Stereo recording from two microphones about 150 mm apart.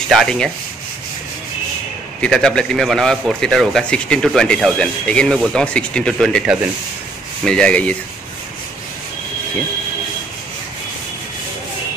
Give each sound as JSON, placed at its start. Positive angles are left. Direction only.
{"t": 0.1, "sound": "a man's voice", "side_deg": 0}
{"t": 2.2, "sound": "a man's voice", "side_deg": 5}